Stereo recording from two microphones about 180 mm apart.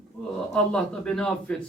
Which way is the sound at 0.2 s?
5° left (ahead or behind).